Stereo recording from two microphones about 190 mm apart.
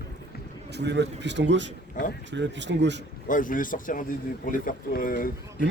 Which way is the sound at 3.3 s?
45° left (ahead or behind).